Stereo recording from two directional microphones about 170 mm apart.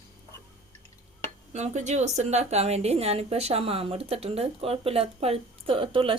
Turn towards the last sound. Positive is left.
turn(degrees=-30)  # may be behind; listen again after turning